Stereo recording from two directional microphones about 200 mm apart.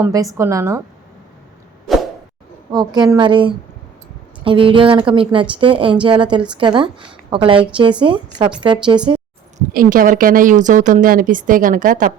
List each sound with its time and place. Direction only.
0.0 s a woman's voice: 15° right (ahead or behind)
1.9 s a sound: centre (ahead or behind)
2.7 s a woman's voice: 20° right (ahead or behind)
9.7 s a woman's voice: 45° right (ahead or behind)